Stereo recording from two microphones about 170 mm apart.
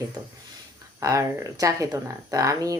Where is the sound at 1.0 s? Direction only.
20° right (ahead or behind).